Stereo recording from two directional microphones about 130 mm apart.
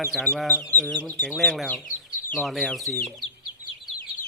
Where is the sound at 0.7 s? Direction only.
15° left (ahead or behind).